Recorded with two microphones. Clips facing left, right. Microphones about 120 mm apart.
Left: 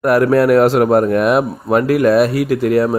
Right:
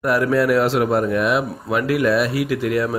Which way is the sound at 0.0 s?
55° left (ahead or behind).